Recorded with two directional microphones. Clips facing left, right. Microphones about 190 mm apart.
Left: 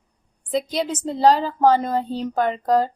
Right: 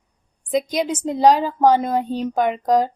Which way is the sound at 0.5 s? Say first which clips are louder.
Right 2 dB; 15° right (ahead or behind).